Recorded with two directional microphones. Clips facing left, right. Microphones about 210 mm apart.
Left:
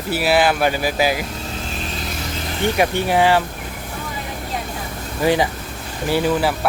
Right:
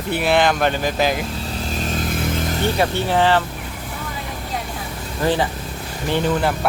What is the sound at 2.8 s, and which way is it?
Speech, 15° left (ahead or behind).